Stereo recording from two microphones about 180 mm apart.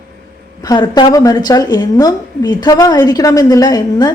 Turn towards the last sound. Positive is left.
turn(degrees=20)  # may be behind; listen again after turning